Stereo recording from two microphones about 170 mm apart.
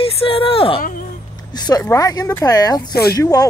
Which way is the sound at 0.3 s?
35° left (ahead or behind).